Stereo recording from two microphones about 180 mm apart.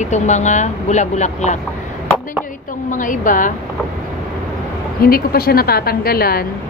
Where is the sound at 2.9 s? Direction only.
45° left (ahead or behind).